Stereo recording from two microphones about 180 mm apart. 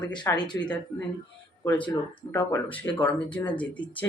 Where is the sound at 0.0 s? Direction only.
25° left (ahead or behind).